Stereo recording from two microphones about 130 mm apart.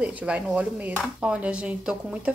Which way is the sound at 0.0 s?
10° right (ahead or behind).